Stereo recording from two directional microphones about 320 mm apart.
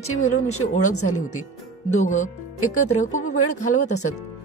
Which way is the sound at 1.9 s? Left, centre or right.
Left.